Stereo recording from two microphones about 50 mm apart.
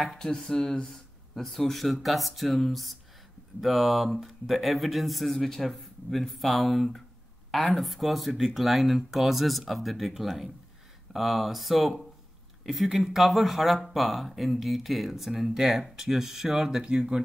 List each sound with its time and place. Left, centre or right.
0.2 s speech: centre